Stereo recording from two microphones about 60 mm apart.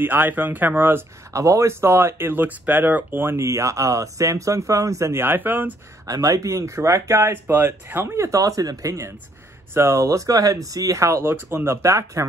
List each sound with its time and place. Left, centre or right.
0.0 s speech: right
1.3 s speech: right
3.3 s speech: right
5.2 s speech: right
6.0 s speech: right
8.4 s speech: right
9.8 s speech: right
11.2 s speech: right